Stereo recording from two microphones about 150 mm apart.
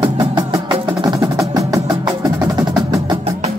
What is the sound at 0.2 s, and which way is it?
Music, 25° right (ahead or behind).